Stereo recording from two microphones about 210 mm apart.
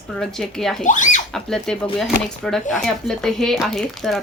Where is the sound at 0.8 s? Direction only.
35° left (ahead or behind).